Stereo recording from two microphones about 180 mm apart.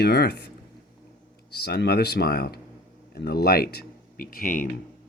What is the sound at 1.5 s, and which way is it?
Speech, 65° left (ahead or behind).